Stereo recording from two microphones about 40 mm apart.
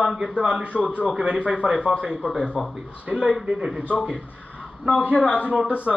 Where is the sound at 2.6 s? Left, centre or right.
Centre.